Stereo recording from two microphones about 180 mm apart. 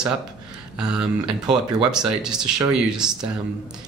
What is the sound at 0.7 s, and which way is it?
Speech, 5° right (ahead or behind).